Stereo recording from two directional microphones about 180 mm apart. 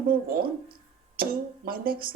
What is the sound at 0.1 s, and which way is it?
Speech, 55° right (ahead or behind).